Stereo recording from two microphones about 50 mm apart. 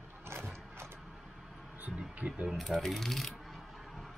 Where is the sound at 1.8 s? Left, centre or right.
Right.